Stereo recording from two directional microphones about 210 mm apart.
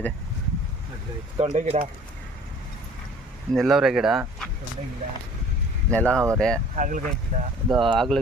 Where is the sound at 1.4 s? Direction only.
30° right (ahead or behind).